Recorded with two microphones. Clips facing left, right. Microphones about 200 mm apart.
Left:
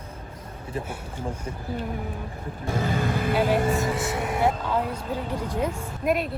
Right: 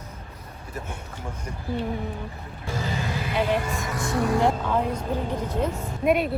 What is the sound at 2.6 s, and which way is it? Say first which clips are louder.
Speech: left 4 dB; 55° left (ahead or behind).